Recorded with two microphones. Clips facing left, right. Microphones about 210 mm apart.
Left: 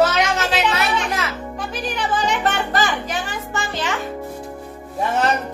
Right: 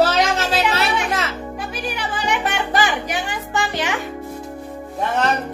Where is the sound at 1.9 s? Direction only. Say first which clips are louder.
Left 3 dB; 15° right (ahead or behind).